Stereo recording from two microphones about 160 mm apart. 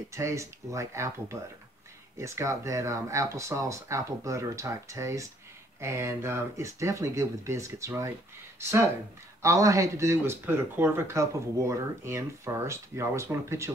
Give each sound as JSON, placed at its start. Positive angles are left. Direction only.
{"t": 0.1, "sound": "speech", "side_deg": -20}